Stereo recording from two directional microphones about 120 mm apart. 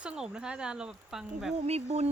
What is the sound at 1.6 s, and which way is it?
Speech, 60° right (ahead or behind).